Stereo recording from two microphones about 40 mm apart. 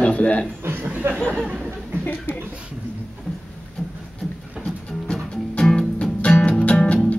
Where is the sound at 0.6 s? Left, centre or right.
Right.